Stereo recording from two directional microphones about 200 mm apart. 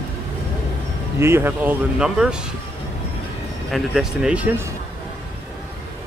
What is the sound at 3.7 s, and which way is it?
Speech, 5° right (ahead or behind).